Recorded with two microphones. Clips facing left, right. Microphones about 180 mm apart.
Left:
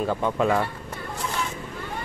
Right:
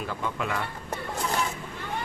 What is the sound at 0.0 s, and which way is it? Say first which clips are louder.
Speech: left 8 dB; 35° left (ahead or behind).